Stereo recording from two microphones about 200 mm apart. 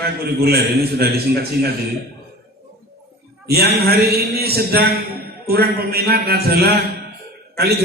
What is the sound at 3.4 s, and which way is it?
A man's voice, 50° right (ahead or behind).